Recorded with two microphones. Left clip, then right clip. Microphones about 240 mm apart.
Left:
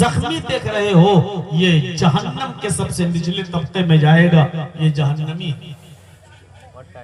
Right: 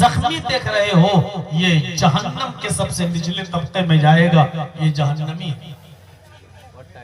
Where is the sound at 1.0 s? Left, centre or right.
Right.